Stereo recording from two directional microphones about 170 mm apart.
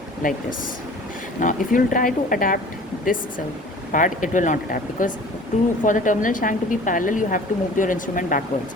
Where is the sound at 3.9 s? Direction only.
50° left (ahead or behind).